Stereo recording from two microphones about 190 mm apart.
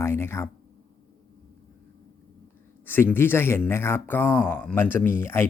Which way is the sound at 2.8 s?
10° left (ahead or behind).